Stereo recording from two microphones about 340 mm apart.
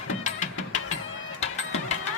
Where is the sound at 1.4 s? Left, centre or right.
Centre.